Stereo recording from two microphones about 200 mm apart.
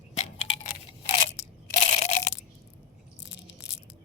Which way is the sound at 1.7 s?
35° left (ahead or behind).